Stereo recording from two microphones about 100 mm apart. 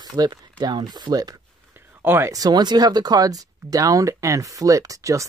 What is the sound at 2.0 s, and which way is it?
Speech, 20° right (ahead or behind).